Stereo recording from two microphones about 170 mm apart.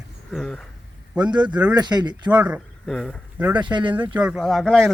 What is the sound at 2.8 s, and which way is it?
Speech, 5° left (ahead or behind).